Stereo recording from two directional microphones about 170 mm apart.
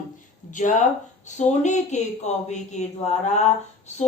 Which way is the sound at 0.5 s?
45° left (ahead or behind).